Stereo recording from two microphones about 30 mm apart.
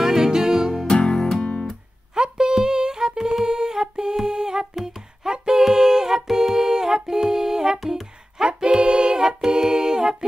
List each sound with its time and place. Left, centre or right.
0.0 s music: centre
0.8 s music: left
2.1 s a sound: right
3.4 s humming: right
4.3 s music: right
5.6 s a sound: centre
6.3 s music: centre